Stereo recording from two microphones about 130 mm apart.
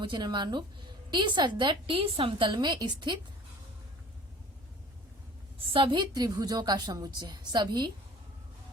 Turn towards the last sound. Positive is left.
turn(degrees=-35)  # may be behind; listen again after turning